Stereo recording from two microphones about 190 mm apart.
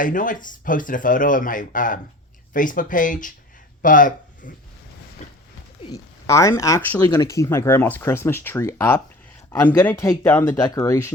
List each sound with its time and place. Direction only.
0.0 s speech: 45° left (ahead or behind)
5.2 s a sound: 40° left (ahead or behind)
5.8 s speech: 20° left (ahead or behind)